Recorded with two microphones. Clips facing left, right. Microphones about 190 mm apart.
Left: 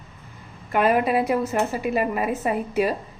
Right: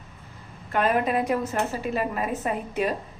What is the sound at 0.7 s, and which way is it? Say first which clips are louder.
A woman's voice: left 3 dB; 10° left (ahead or behind).